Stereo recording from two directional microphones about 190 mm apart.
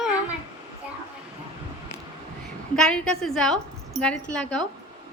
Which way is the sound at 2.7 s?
5° left (ahead or behind).